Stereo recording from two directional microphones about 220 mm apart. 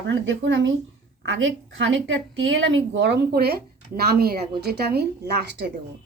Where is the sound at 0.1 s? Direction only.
55° right (ahead or behind).